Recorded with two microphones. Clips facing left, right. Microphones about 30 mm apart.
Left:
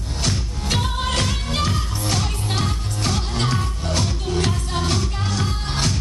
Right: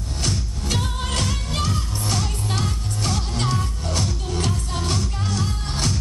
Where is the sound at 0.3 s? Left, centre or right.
Left.